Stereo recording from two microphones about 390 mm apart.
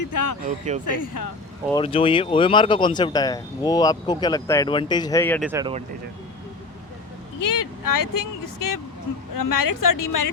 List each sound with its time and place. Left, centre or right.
0.1 s speech: left
0.4 s speech: centre
0.9 s speech: left
1.7 s speech: centre
7.3 s speech: left